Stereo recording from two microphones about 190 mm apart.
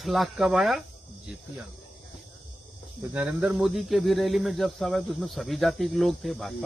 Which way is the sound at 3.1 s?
5° right (ahead or behind).